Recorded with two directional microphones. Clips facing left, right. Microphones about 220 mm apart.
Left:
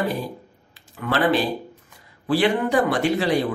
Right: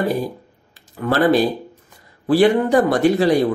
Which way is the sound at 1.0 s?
40° right (ahead or behind).